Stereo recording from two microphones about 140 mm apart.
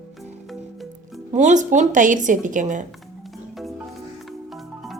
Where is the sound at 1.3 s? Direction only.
60° right (ahead or behind).